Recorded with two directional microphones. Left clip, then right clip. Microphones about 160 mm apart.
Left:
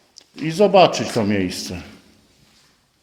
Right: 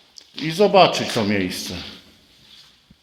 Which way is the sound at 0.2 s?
35° left (ahead or behind).